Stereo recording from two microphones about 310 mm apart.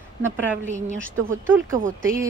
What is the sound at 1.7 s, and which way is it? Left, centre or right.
Speech, right.